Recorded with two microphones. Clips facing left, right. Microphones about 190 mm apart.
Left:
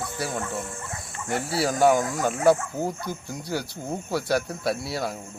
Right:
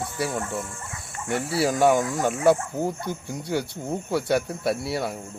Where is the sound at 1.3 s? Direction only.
30° left (ahead or behind).